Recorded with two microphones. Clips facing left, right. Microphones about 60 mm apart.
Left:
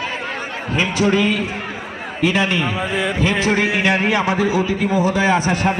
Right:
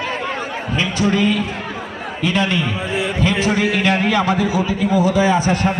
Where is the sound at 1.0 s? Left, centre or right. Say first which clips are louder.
Even; left.